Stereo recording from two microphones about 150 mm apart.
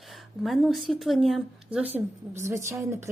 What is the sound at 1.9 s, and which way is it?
A woman's voice, 15° right (ahead or behind).